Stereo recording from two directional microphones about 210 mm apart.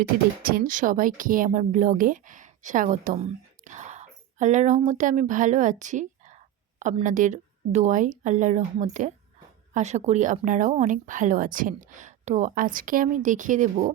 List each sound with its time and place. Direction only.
0.4 s a woman's voice: 45° right (ahead or behind)